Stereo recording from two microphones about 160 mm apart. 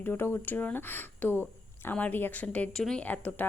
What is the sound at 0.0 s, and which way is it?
A woman's voice, 15° left (ahead or behind).